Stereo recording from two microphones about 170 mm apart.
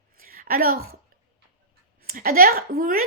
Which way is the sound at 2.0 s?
60° right (ahead or behind).